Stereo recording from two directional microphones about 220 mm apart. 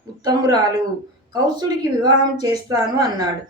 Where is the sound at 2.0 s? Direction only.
15° right (ahead or behind).